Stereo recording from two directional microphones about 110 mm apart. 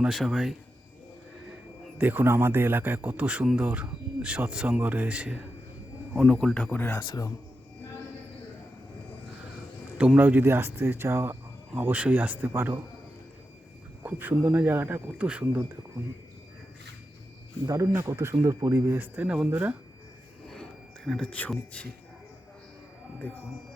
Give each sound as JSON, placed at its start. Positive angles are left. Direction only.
{"t": 0.0, "sound": "speech", "side_deg": 0}
{"t": 2.0, "sound": "a man's voice", "side_deg": -15}
{"t": 6.2, "sound": "speech", "side_deg": 10}
{"t": 10.2, "sound": "a man's voice", "side_deg": -15}
{"t": 14.0, "sound": "a man's voice", "side_deg": -15}
{"t": 17.9, "sound": "speech", "side_deg": -20}
{"t": 20.5, "sound": "a sound", "side_deg": 5}
{"t": 23.2, "sound": "speech", "side_deg": 10}